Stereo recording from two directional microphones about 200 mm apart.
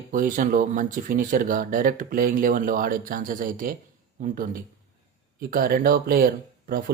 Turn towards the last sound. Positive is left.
turn(degrees=-45)  # may be behind; listen again after turning